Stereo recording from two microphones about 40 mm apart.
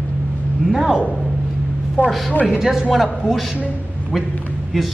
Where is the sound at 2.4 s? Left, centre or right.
Centre.